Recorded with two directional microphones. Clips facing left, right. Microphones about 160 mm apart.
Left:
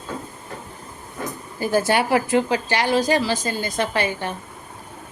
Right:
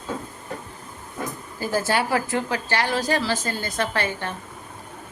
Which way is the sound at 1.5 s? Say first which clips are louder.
Left 4 dB; 15° left (ahead or behind).